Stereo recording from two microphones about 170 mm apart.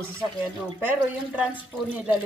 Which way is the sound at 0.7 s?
10° right (ahead or behind).